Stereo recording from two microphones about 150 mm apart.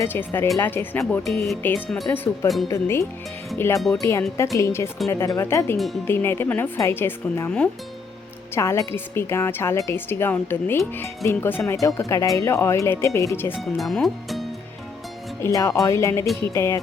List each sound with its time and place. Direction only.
0.0 s a woman's voice: 15° left (ahead or behind)
1.3 s a woman's voice: centre (ahead or behind); by 3.0 s 15° left (ahead or behind)
3.8 s speech: centre (ahead or behind)
4.5 s speech: 20° left (ahead or behind)
5.7 s speech: centre (ahead or behind)
6.1 s a woman's voice: 15° left (ahead or behind)
13.6 s speech: centre (ahead or behind)
15.4 s a woman's voice: 20° left (ahead or behind)